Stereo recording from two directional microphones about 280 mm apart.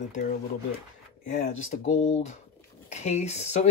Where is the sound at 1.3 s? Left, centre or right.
Left.